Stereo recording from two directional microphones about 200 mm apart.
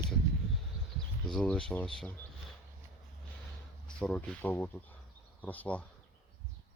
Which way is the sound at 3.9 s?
5° left (ahead or behind).